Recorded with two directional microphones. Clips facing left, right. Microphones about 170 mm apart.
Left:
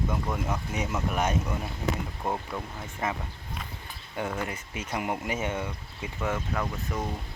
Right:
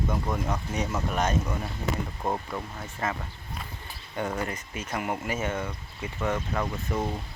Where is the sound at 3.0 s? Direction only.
15° left (ahead or behind).